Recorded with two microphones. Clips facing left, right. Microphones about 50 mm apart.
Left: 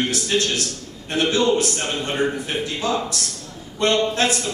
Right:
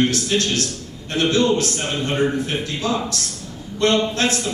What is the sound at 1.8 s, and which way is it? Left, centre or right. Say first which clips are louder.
A man's voice: right 2 dB; centre.